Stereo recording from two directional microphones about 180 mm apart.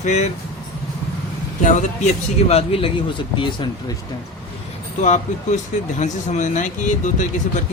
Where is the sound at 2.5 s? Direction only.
35° left (ahead or behind).